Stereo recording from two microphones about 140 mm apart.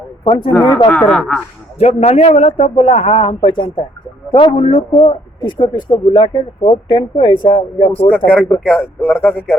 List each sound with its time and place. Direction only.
0.3 s a man's voice: 40° left (ahead or behind)
0.9 s speech: 5° left (ahead or behind)
1.8 s a man's voice: 50° left (ahead or behind)
8.3 s speech: 10° left (ahead or behind)